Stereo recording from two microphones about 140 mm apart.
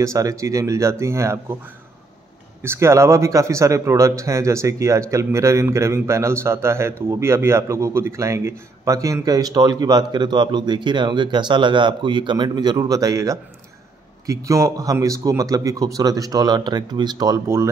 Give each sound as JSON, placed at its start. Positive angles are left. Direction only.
{"t": 0.0, "sound": "speech", "side_deg": -25}
{"t": 2.6, "sound": "speech", "side_deg": -20}